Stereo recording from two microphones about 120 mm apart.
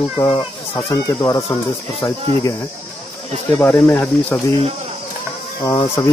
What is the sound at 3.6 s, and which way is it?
Speech, 10° left (ahead or behind).